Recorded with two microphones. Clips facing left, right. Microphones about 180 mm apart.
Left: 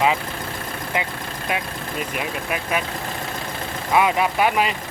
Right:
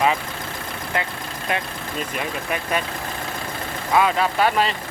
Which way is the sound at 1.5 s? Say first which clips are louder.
Even; 5° left (ahead or behind).